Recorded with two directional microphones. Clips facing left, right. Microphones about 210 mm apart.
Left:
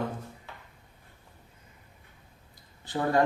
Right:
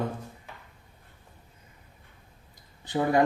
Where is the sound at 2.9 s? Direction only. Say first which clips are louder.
Right 2 dB; 15° right (ahead or behind).